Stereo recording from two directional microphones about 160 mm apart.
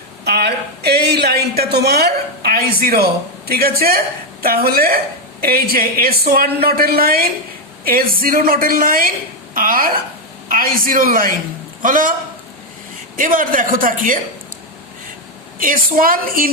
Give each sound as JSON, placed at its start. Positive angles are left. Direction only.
{"t": 0.3, "sound": "a sound", "side_deg": -85}
{"t": 4.4, "sound": "a man's voice", "side_deg": -70}
{"t": 13.1, "sound": "a man's voice", "side_deg": -60}
{"t": 15.5, "sound": "a man's voice", "side_deg": -60}